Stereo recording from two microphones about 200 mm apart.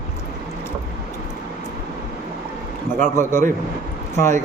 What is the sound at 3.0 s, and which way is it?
Speech, 40° right (ahead or behind).